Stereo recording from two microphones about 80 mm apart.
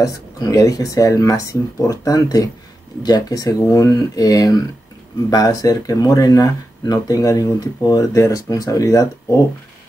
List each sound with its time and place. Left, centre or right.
0.0 s speech: left